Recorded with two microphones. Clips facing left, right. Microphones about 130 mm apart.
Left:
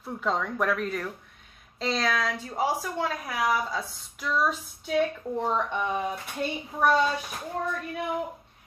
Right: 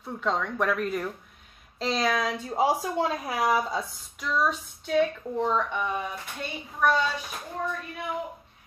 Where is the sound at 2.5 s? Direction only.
25° right (ahead or behind).